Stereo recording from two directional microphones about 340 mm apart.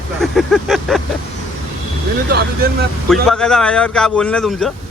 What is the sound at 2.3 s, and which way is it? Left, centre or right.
Speech, right.